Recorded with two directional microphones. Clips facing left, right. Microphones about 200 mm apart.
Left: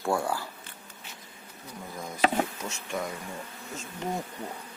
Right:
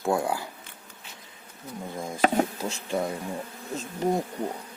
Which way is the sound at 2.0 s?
25° right (ahead or behind).